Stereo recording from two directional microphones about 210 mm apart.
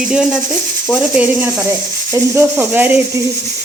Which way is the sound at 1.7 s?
15° right (ahead or behind).